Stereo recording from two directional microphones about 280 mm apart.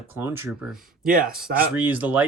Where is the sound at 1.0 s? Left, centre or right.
Right.